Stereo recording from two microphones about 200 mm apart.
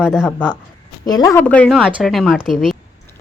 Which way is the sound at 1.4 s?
5° left (ahead or behind).